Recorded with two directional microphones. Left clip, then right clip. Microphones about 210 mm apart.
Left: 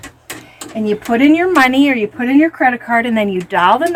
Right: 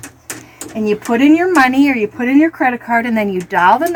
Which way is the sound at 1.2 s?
15° left (ahead or behind).